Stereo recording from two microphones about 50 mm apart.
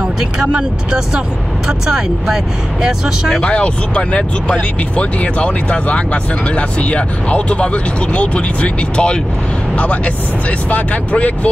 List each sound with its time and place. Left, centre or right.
0.4 s speech: centre
3.4 s speech: left